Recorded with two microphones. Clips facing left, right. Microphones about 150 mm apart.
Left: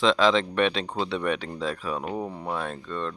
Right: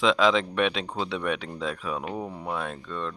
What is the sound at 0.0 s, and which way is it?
Speech, 5° right (ahead or behind).